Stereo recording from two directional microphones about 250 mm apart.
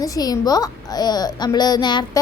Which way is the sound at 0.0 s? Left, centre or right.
Centre.